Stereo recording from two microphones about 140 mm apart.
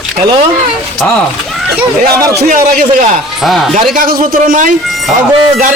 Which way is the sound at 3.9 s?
90° right.